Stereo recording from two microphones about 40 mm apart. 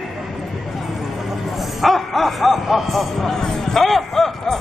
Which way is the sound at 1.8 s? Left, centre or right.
Centre.